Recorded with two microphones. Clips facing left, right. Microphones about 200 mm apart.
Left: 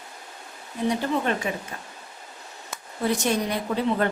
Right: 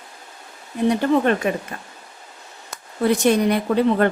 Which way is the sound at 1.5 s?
65° right (ahead or behind).